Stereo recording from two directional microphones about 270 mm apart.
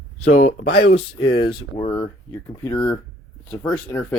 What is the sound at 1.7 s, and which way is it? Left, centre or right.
Speech, centre.